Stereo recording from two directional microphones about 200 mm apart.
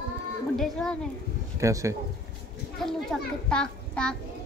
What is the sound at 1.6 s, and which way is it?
Speech, 15° right (ahead or behind).